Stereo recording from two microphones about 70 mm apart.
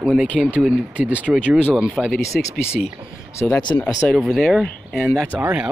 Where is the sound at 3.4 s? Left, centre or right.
Centre.